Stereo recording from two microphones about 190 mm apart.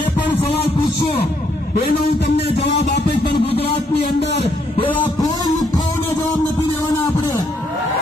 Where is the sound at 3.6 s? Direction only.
60° left (ahead or behind).